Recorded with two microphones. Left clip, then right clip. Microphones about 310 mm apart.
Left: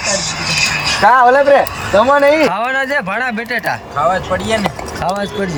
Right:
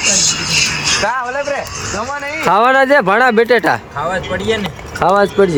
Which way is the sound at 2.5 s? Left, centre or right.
Centre.